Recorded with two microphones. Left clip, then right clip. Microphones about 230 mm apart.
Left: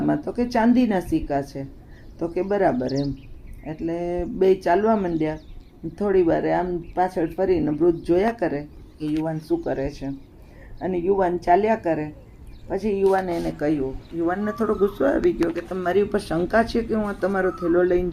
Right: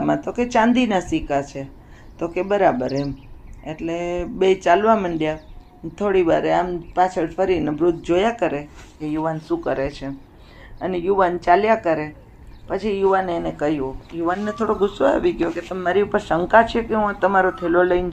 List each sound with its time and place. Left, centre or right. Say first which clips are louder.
0.0 s speech: right 3 dB; centre
2.7 s speech: right 2 dB; centre
3.7 s speech: right 2 dB; centre
6.0 s speech: right 2 dB; centre